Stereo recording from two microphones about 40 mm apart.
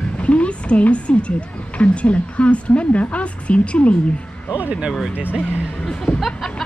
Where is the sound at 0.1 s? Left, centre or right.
Left.